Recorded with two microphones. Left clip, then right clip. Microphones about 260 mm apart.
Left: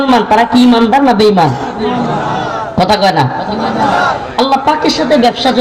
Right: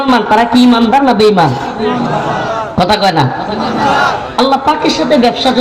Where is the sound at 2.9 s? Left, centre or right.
Left.